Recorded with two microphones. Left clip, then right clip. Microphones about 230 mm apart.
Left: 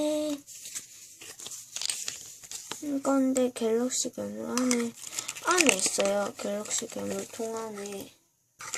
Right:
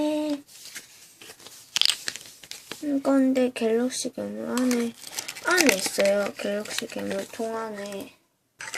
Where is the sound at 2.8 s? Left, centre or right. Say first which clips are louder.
Right 4 dB; centre.